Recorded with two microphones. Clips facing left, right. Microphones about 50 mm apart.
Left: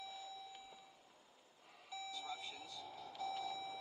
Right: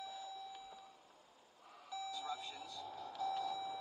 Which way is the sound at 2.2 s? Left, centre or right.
Right.